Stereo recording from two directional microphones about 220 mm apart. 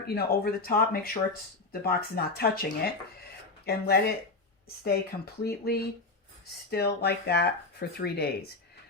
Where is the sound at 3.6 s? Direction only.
45° left (ahead or behind).